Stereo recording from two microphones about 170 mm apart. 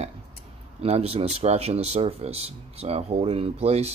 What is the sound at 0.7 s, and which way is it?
Speech, 35° right (ahead or behind).